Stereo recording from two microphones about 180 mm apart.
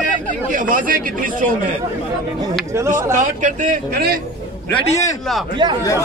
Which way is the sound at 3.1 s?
45° right (ahead or behind).